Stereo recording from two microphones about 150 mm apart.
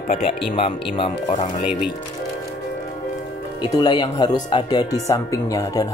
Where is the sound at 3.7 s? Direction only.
30° left (ahead or behind).